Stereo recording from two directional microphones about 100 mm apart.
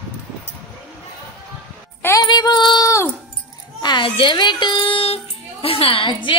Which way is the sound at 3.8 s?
50° left (ahead or behind).